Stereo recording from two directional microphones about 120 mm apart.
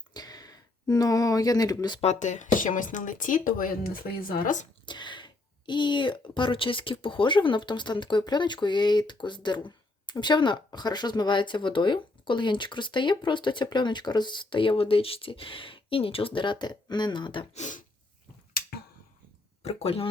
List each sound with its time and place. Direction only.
0.1 s a sound: 35° left (ahead or behind)
2.0 s speech: 70° left (ahead or behind); by 4.6 s 90° left
4.9 s speech: 40° left (ahead or behind)
17.5 s speech: 85° left
19.6 s speech: 55° left (ahead or behind)